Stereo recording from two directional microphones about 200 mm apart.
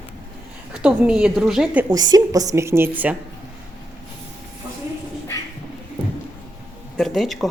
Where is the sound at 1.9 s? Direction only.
20° right (ahead or behind).